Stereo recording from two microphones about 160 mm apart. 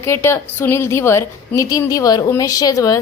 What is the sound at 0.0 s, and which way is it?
A woman's voice, 15° left (ahead or behind).